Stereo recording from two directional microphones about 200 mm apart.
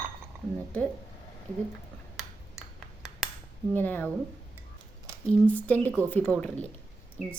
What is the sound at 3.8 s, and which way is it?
Speech, 10° left (ahead or behind).